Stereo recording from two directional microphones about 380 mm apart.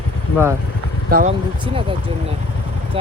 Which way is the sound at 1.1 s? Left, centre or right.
Centre.